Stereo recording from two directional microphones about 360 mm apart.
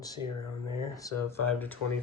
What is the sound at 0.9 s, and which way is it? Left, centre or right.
Speech, centre.